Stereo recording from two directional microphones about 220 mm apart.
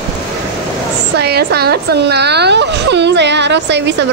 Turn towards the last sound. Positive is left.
turn(degrees=-50)  # may be behind; listen again after turning